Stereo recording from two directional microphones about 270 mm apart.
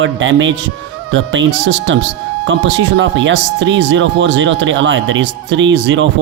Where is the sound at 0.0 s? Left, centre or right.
Right.